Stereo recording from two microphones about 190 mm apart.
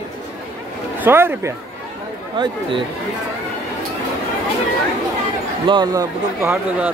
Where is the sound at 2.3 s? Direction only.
25° right (ahead or behind).